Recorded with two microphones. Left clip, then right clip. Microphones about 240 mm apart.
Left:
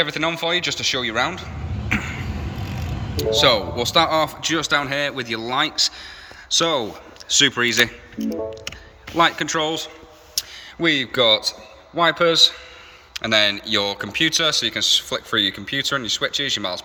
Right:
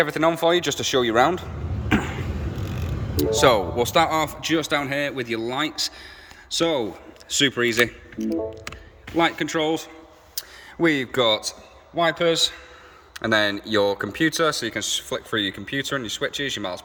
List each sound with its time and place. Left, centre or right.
0.0 s a man's voice: right
1.9 s a sound: right
3.2 s speech: right
9.1 s a man's voice: centre
13.1 s speech: right; by 16.8 s centre